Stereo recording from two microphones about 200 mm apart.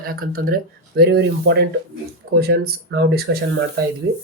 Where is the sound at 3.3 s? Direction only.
70° right (ahead or behind).